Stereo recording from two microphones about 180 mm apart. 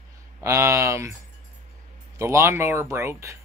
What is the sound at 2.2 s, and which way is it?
Speech, 15° right (ahead or behind).